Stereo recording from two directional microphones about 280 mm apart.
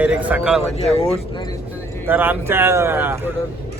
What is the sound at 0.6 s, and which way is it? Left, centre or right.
Speech, left.